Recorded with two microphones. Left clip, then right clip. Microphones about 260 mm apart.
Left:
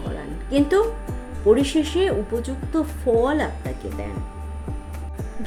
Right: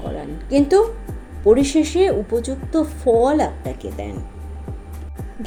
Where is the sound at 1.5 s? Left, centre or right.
Centre.